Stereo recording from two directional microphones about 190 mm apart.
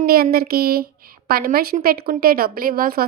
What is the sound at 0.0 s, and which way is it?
A woman's voice, 55° right (ahead or behind).